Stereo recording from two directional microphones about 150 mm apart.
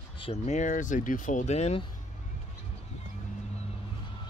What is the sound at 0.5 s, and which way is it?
Speech, 55° left (ahead or behind).